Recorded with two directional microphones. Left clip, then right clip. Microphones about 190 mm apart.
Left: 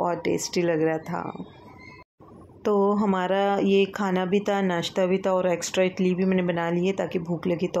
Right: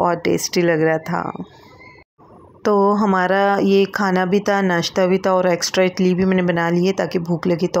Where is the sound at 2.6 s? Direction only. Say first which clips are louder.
Right 7 dB; 30° right (ahead or behind).